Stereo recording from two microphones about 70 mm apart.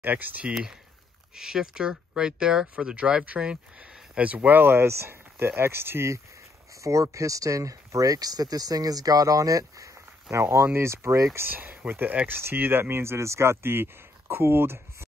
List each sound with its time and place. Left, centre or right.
0.0 s speech: right
1.3 s speech: centre; by 9.9 s right
10.3 s speech: right
11.3 s speech: right